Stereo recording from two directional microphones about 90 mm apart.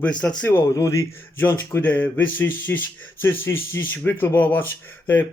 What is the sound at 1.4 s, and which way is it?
Speech, 25° left (ahead or behind).